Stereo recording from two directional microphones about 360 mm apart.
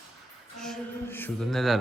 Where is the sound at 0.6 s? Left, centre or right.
Centre.